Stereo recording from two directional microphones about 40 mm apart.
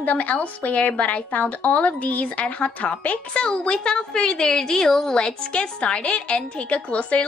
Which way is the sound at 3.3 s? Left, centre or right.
Left.